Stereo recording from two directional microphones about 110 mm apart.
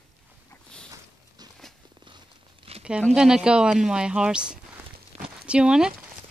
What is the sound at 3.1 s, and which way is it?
A woman's voice, 5° right (ahead or behind).